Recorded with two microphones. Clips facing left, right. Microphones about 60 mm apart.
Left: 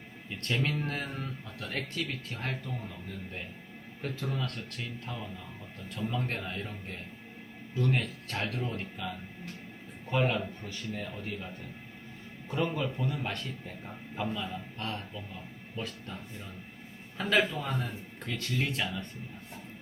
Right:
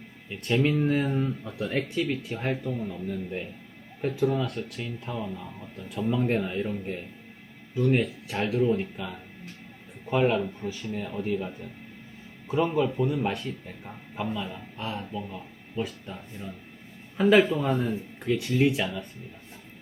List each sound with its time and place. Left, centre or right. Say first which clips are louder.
0.3 s speech: right 7 dB; centre
4.0 s speech: right 10 dB; centre
12.5 s speech: right 7 dB; centre